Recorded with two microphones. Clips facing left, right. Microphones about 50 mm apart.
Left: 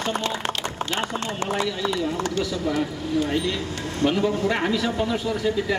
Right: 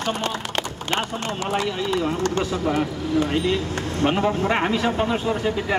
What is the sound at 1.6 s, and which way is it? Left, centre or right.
A man's voice, right.